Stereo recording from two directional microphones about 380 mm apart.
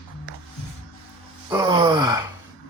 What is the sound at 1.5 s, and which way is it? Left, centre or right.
Gasp, centre.